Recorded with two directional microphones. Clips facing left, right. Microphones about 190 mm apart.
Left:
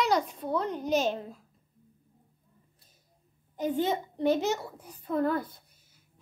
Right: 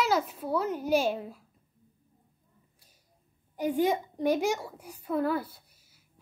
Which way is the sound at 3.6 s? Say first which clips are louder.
Right 2 dB; 10° right (ahead or behind).